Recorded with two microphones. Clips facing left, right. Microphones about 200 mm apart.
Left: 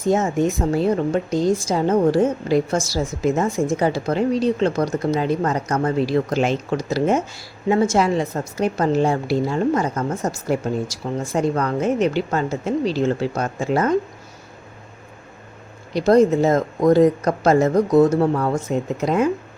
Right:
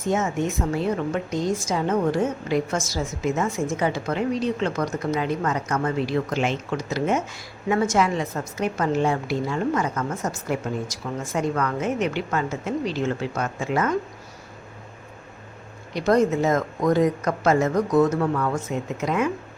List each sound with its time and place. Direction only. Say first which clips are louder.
0.0 s speech: left 5 dB; 35° left (ahead or behind)
15.9 s speech: left 5 dB; 35° left (ahead or behind)